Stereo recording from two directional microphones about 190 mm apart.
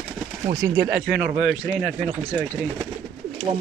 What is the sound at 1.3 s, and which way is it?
Speech, centre (ahead or behind).